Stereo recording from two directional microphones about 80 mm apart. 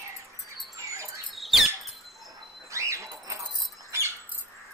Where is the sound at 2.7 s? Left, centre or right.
Right.